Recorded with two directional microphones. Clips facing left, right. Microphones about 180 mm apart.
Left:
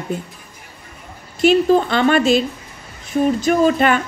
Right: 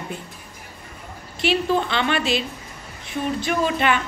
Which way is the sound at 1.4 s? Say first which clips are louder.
Left 8 dB; 45° left (ahead or behind).